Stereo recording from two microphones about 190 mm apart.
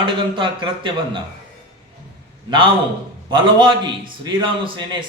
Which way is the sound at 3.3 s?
25° right (ahead or behind).